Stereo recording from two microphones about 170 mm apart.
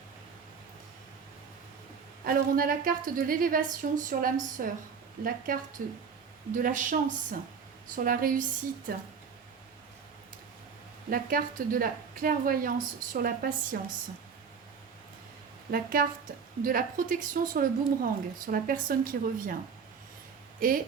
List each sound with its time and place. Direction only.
2.2 s a woman's voice: 60° right (ahead or behind)
11.1 s a woman's voice: 55° right (ahead or behind)
15.7 s a woman's voice: 60° right (ahead or behind)
20.6 s speech: 55° right (ahead or behind)